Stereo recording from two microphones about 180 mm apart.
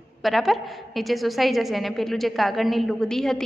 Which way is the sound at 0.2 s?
Centre (ahead or behind).